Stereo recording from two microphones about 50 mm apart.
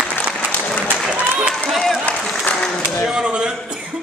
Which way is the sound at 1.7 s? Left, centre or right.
Centre.